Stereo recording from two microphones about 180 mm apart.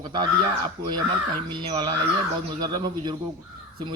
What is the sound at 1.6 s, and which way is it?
Speech, 25° right (ahead or behind).